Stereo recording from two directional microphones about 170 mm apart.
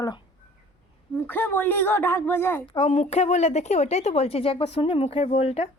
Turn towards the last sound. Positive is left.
turn(degrees=40)  # may be behind; listen again after turning